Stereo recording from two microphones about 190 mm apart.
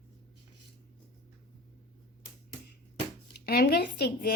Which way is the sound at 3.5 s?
55° left (ahead or behind).